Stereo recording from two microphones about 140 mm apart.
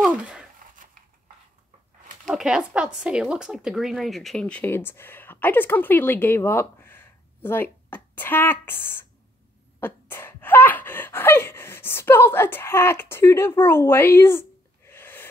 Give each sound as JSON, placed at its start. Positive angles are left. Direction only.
{"t": 0.0, "sound": "a sound", "side_deg": -10}
{"t": 2.2, "sound": "speech", "side_deg": -5}
{"t": 9.8, "sound": "gasp", "side_deg": 15}
{"t": 14.9, "sound": "snort", "side_deg": 15}